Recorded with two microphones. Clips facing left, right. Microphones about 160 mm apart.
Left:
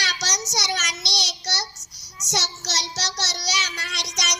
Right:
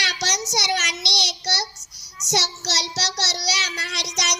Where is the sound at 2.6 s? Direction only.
35° right (ahead or behind).